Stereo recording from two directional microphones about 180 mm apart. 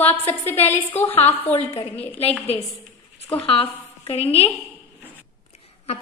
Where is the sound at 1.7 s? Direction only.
30° left (ahead or behind).